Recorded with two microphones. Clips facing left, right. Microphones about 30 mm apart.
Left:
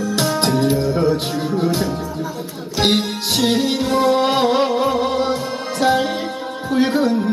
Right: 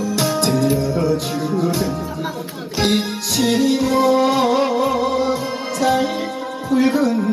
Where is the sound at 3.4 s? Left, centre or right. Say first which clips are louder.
Right 3 dB; left.